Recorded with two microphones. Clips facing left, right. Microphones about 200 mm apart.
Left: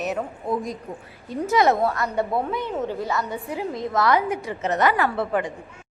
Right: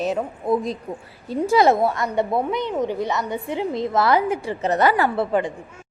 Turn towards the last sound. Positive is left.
turn(degrees=-30)  # may be behind; listen again after turning